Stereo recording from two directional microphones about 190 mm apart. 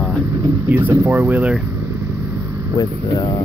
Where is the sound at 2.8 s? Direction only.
20° left (ahead or behind).